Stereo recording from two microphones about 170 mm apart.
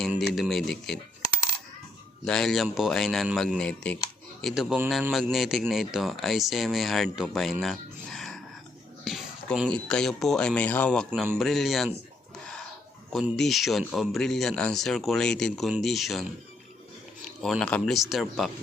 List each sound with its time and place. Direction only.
0.2 s speech: centre (ahead or behind)
2.2 s speech: 5° left (ahead or behind)
7.6 s a sound: centre (ahead or behind)
9.0 s speech: centre (ahead or behind)
13.1 s speech: centre (ahead or behind)
17.4 s speech: 5° left (ahead or behind)